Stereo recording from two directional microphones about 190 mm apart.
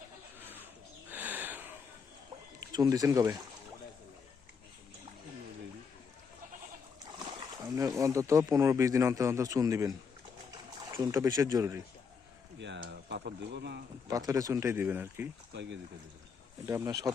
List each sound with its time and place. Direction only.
0.3 s bird: 10° right (ahead or behind)
1.1 s a sound: 10° right (ahead or behind)
2.7 s speech: 20° right (ahead or behind)
7.3 s speech: 20° right (ahead or behind)
10.9 s speech: 15° right (ahead or behind)
12.5 s speech: 70° right (ahead or behind)
14.1 s speech: 20° right (ahead or behind)
16.6 s speech: 15° right (ahead or behind)